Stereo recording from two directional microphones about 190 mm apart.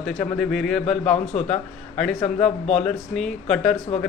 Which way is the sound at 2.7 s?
Centre (ahead or behind).